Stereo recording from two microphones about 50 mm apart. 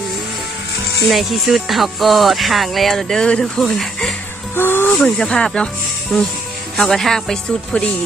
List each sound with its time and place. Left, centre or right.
1.0 s speech: centre
3.6 s speech: centre
4.5 s snake: left
4.9 s speech: centre